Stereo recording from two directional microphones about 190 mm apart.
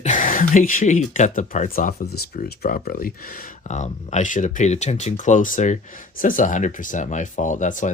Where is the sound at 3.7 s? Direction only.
40° left (ahead or behind).